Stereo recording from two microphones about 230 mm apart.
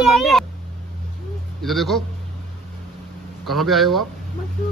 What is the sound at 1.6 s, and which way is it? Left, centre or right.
Speech, centre.